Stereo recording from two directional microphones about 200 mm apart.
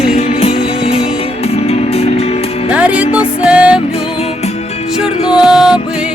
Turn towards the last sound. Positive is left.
turn(degrees=0)  # may be behind; listen again after turning